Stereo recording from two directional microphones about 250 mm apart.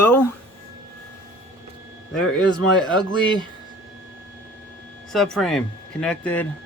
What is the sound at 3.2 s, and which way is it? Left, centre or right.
Speech, centre.